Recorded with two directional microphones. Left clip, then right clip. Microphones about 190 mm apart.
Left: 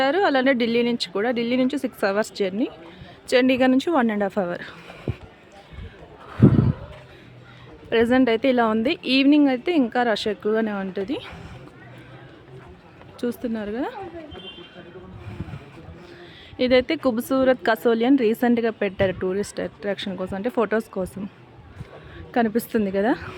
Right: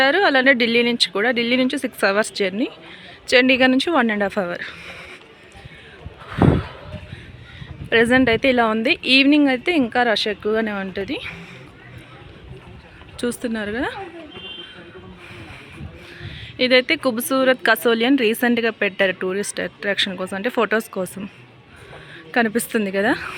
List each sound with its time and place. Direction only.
0.0 s a woman's voice: 5° left (ahead or behind)
4.5 s speech: 20° left (ahead or behind)
6.2 s a sound: centre (ahead or behind)
7.9 s a woman's voice: centre (ahead or behind)
13.1 s a woman's voice: centre (ahead or behind)
16.2 s a woman's voice: 15° left (ahead or behind)
22.3 s a woman's voice: 10° left (ahead or behind)